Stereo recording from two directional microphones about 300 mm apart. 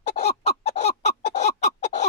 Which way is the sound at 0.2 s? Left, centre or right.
Left.